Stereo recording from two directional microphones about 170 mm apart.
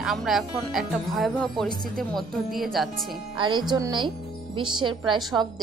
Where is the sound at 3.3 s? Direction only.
30° right (ahead or behind).